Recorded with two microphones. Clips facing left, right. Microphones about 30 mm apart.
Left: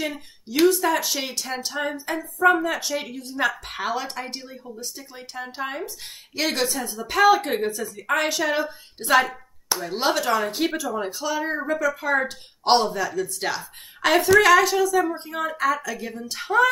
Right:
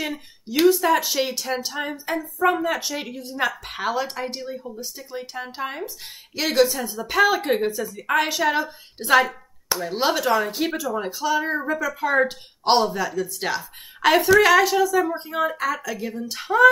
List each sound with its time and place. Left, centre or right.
0.5 s a woman's voice: centre